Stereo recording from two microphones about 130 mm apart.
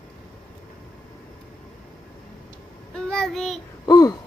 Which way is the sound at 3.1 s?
5° left (ahead or behind).